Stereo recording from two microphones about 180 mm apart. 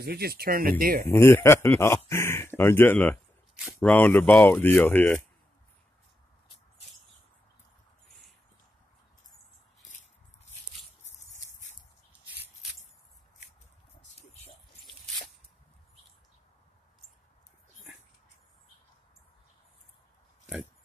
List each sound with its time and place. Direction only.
0.0 s speech: 60° right (ahead or behind)
1.1 s speech: 15° left (ahead or behind)